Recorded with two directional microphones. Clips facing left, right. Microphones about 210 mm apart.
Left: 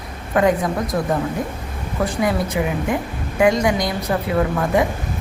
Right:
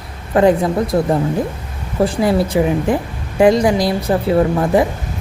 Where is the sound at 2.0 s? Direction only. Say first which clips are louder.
Right 5 dB; 30° right (ahead or behind).